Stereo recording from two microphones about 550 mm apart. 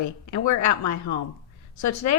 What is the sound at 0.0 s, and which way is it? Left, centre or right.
Speech, left.